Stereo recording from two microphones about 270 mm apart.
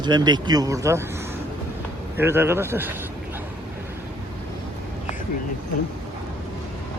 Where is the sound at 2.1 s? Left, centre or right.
Centre.